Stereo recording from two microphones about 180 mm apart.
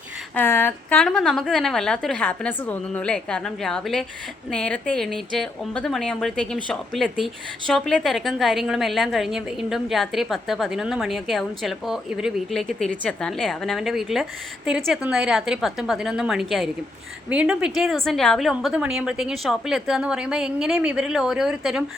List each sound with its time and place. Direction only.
0.3 s a woman's voice: 10° left (ahead or behind)